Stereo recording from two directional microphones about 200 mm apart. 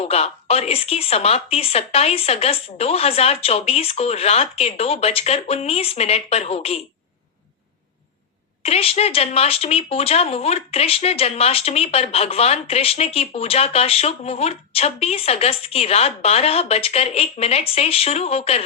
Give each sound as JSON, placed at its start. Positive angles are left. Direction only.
{"t": 0.0, "sound": "speech", "side_deg": 30}
{"t": 8.6, "sound": "speech", "side_deg": 30}